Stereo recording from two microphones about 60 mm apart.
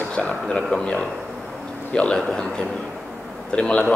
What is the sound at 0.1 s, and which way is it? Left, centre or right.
A man's voice, centre.